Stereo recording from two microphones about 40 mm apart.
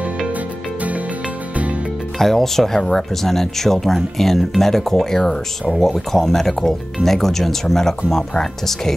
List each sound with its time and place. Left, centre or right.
2.1 s speech: centre